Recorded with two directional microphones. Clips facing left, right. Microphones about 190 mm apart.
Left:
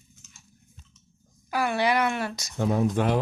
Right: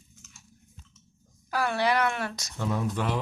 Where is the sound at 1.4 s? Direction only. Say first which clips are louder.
Left 2 dB; 15° left (ahead or behind).